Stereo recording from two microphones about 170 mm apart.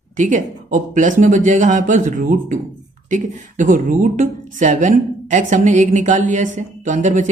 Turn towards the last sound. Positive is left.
turn(degrees=-45)  # may be behind; listen again after turning